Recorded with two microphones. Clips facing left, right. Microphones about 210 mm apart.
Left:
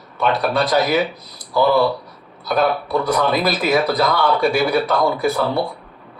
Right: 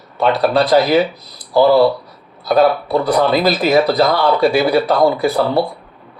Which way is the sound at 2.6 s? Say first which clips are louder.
Right 5 dB; 30° right (ahead or behind).